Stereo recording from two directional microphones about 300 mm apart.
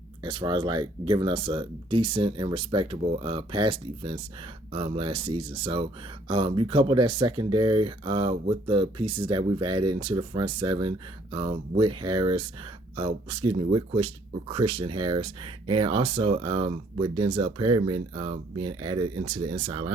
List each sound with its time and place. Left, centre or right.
0.2 s speech: centre